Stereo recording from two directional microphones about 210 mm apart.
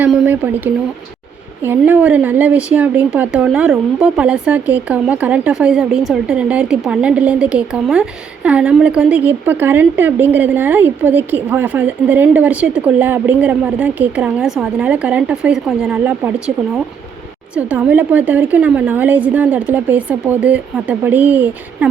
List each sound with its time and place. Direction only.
0.0 s speech: 10° right (ahead or behind)
17.5 s speech: 5° right (ahead or behind)